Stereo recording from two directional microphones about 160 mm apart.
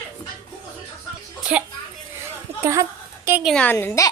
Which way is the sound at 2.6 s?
20° right (ahead or behind).